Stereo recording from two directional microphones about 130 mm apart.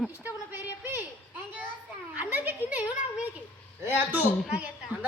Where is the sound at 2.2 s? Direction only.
15° right (ahead or behind).